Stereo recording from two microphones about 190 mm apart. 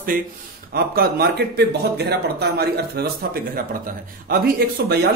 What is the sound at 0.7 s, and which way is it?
Speech, 55° right (ahead or behind).